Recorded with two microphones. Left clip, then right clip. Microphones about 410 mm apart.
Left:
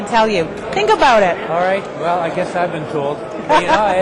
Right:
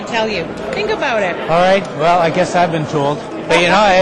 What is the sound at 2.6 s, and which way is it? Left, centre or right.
Speech, right.